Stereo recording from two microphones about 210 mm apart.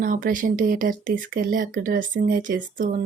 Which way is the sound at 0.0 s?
40° right (ahead or behind).